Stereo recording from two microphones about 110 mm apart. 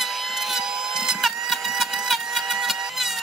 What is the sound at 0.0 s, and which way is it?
Vehicle, centre (ahead or behind).